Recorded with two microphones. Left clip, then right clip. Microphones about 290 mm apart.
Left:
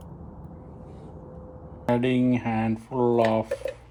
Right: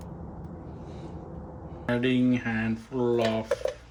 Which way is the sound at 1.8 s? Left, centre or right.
Centre.